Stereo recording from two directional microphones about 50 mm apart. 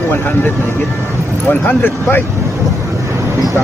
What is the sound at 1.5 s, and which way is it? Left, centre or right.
Speech, left.